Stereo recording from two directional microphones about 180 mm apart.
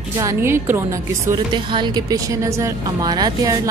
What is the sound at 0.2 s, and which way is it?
Speech, 15° right (ahead or behind).